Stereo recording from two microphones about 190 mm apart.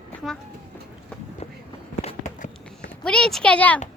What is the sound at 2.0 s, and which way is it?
Walk, 35° left (ahead or behind).